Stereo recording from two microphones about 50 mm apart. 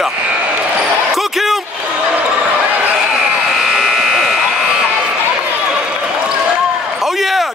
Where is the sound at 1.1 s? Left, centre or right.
Centre.